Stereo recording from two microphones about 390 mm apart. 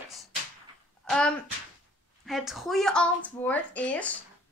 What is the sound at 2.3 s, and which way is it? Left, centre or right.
A woman's voice, centre.